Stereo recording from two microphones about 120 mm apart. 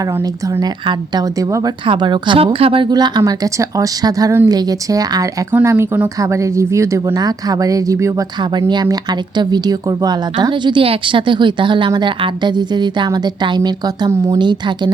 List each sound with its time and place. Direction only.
0.0 s speech: 30° right (ahead or behind)
1.8 s speech: 40° right (ahead or behind)
2.9 s speech: 35° right (ahead or behind)
5.5 s speech: 20° right (ahead or behind); by 14.9 s 40° right (ahead or behind)